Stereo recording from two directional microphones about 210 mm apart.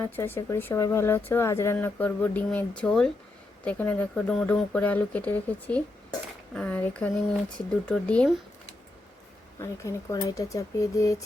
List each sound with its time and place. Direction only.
0.0 s speech: 10° left (ahead or behind)
9.6 s speech: 15° left (ahead or behind)